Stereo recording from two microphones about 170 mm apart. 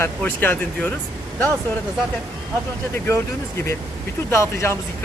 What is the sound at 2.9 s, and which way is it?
Speech, 15° left (ahead or behind).